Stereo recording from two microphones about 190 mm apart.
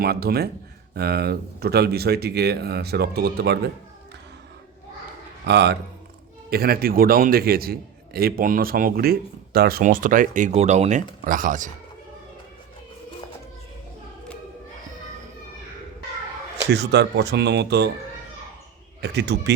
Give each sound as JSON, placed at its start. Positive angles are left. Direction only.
{"t": 0.0, "sound": "speech", "side_deg": -55}
{"t": 5.5, "sound": "a man's voice", "side_deg": -60}
{"t": 16.7, "sound": "speech", "side_deg": -65}
{"t": 19.0, "sound": "speech", "side_deg": -60}